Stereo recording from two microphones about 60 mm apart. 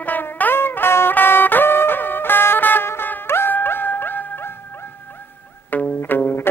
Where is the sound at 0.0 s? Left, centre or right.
Left.